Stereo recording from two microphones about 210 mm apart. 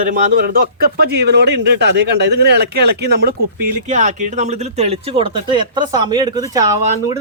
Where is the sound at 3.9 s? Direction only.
35° right (ahead or behind); by 7.1 s 15° right (ahead or behind).